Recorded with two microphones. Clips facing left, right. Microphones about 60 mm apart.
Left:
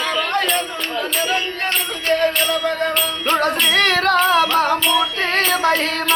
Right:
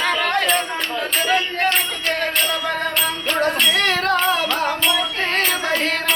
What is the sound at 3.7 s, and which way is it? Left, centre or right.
Music, left.